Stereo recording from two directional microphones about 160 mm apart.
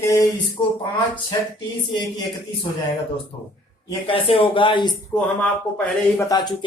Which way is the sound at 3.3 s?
30° left (ahead or behind).